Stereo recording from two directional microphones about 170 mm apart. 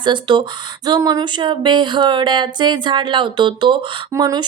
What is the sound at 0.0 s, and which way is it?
A woman's voice, 25° right (ahead or behind).